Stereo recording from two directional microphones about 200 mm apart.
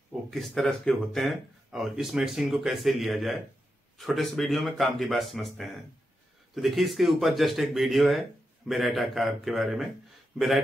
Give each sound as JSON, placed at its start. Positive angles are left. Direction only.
{"t": 0.1, "sound": "speech", "side_deg": 0}